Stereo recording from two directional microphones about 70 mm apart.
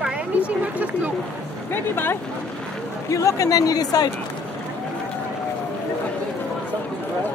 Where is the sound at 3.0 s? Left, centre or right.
Left.